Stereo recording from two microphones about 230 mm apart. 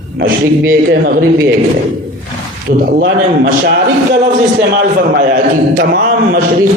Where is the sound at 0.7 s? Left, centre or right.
Right.